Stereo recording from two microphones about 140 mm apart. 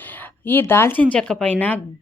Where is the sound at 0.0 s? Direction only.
15° left (ahead or behind).